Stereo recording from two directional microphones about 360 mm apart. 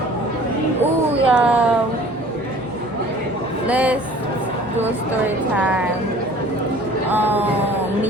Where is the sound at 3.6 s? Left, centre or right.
Centre.